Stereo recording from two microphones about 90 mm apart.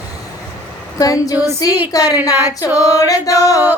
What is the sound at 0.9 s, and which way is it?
A woman's voice, 45° left (ahead or behind).